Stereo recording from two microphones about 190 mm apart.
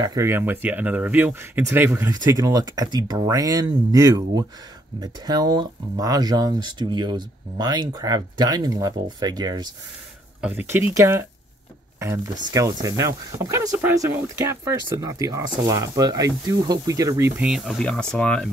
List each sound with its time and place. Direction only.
0.0 s speech: 15° right (ahead or behind)
10.4 s speech: 10° right (ahead or behind)
12.5 s speech: 15° right (ahead or behind)
17.4 s speech: centre (ahead or behind)